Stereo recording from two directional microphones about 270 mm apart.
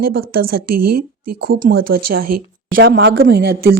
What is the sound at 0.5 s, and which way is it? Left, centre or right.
Speech, right.